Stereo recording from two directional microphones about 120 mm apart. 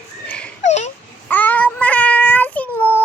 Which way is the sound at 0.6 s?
70° left (ahead or behind).